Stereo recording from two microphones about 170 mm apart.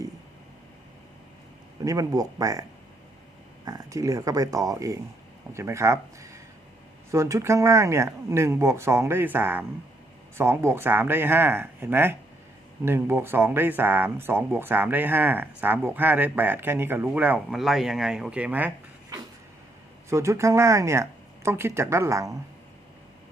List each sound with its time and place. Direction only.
1.8 s speech: 20° right (ahead or behind)
3.7 s speech: 20° right (ahead or behind)
20.1 s speech: 15° right (ahead or behind)